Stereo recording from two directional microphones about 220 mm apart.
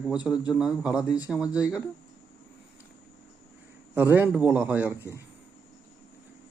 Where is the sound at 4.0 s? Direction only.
10° right (ahead or behind).